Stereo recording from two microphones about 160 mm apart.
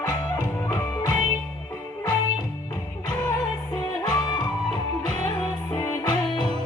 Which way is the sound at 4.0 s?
25° left (ahead or behind).